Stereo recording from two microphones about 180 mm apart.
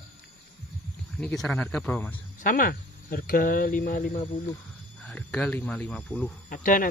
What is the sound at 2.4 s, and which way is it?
Speech, 50° left (ahead or behind).